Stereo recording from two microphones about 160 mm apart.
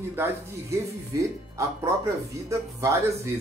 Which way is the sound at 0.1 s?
15° right (ahead or behind).